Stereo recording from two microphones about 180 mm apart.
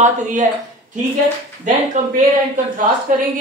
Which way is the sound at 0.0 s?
40° right (ahead or behind).